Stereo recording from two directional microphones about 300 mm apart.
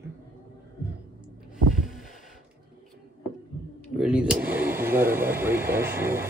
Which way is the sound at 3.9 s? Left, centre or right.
Centre.